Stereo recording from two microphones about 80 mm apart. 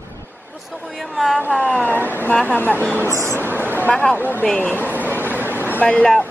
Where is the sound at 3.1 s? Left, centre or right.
Right.